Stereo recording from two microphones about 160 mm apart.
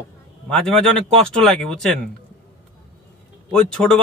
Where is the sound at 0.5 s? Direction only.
5° left (ahead or behind).